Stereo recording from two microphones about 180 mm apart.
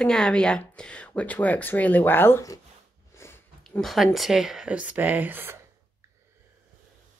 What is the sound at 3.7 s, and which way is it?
Speech, centre (ahead or behind).